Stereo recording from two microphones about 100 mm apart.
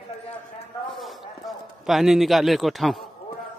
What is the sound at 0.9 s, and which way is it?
Clip-clop, centre (ahead or behind).